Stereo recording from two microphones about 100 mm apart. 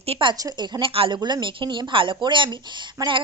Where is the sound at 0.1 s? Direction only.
55° right (ahead or behind).